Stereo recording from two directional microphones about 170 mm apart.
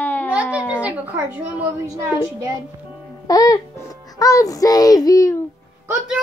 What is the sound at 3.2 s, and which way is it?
Music, 20° left (ahead or behind).